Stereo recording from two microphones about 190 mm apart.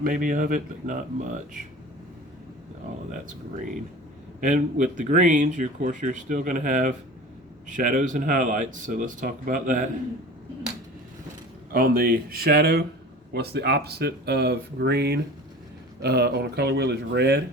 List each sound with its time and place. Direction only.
0.0 s speech: 45° right (ahead or behind)
4.4 s speech: 40° right (ahead or behind)
11.7 s speech: 50° right (ahead or behind)